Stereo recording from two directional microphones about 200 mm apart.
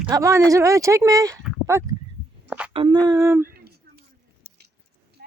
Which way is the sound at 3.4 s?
50° right (ahead or behind).